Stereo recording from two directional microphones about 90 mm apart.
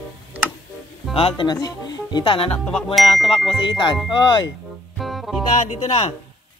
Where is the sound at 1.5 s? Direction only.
45° left (ahead or behind); by 2.5 s 65° left (ahead or behind).